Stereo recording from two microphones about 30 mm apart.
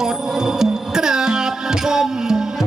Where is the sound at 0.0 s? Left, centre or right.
Centre.